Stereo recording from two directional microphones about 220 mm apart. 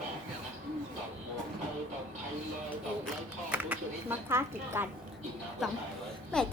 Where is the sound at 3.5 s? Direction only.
10° right (ahead or behind).